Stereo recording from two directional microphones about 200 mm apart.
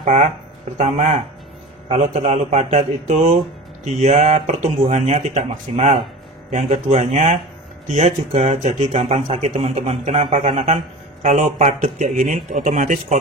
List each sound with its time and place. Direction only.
0.0 s speech: 35° right (ahead or behind)